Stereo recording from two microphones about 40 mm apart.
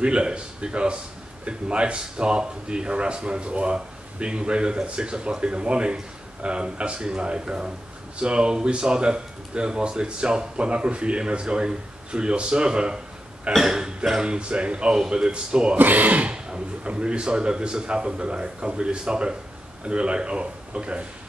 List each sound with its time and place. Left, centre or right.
0.0 s a man's voice: right
14.2 s a man's voice: right
15.8 s speech: right
16.3 s a man's voice: right